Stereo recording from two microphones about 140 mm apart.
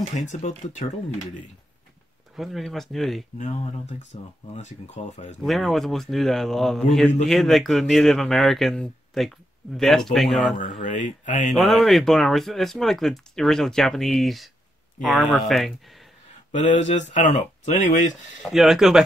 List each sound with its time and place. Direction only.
0.1 s speech: 60° left (ahead or behind)
2.3 s a man's voice: centre (ahead or behind)
3.5 s speech: 55° left (ahead or behind)
5.4 s a man's voice: centre (ahead or behind)
10.8 s speech: 60° left (ahead or behind)
11.5 s a man's voice: centre (ahead or behind)
16.5 s speech: 60° left (ahead or behind)
18.4 s a man's voice: centre (ahead or behind)